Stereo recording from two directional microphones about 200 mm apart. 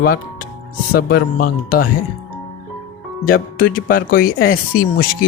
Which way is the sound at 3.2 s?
45° left (ahead or behind).